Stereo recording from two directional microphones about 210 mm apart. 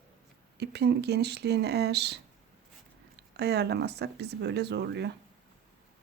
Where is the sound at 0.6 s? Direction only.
50° right (ahead or behind).